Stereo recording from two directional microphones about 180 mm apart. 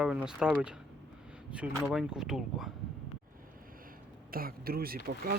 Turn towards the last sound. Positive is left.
turn(degrees=-55)  # may be behind; listen again after turning